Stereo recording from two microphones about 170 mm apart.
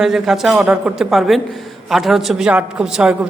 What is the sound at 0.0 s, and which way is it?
A woman's voice, centre (ahead or behind).